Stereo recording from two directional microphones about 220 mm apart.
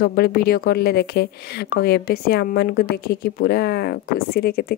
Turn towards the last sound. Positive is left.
turn(degrees=45)  # may be behind; listen again after turning